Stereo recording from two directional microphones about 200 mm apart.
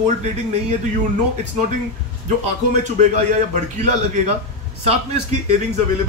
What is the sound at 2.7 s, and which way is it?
A man's voice, 35° right (ahead or behind).